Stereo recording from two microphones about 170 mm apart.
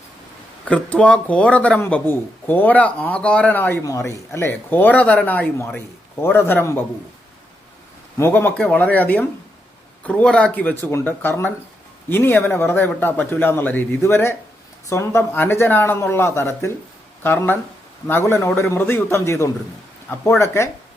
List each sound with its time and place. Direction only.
0.7 s a man's voice: 5° left (ahead or behind)
8.2 s a man's voice: 10° left (ahead or behind)